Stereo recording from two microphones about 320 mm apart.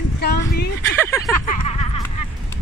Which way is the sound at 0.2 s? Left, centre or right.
Left.